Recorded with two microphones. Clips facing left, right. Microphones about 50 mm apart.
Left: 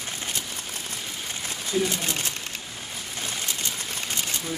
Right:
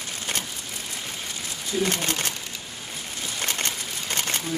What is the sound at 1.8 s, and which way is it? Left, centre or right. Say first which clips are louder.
Speech: right 2 dB; right.